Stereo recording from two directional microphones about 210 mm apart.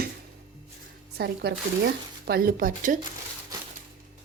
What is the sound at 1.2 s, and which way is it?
A woman's voice, 50° right (ahead or behind).